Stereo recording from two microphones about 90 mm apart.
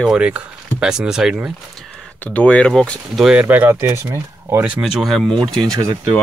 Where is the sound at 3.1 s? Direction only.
5° right (ahead or behind).